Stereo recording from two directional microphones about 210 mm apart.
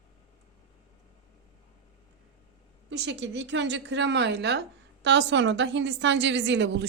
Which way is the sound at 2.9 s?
55° right (ahead or behind).